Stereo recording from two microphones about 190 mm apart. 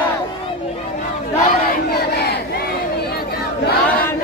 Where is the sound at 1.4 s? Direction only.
55° left (ahead or behind).